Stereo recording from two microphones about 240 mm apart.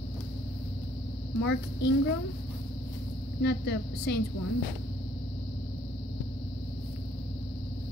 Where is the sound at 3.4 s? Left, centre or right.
Left.